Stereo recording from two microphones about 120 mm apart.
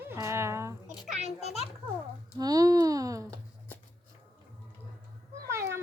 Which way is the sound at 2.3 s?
30° right (ahead or behind).